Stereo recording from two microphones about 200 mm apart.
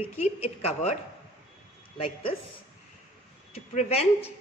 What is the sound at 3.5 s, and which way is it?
Speech, 30° left (ahead or behind).